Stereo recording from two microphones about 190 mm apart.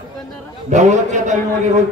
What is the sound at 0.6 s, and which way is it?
Speech, 40° right (ahead or behind).